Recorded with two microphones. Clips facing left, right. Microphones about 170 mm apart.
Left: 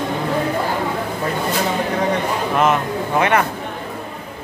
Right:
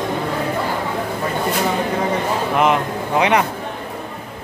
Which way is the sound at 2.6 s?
15° right (ahead or behind).